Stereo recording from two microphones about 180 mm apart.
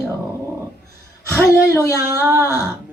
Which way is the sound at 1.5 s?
15° left (ahead or behind).